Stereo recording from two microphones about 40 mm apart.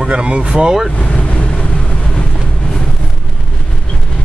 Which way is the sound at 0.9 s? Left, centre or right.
Left.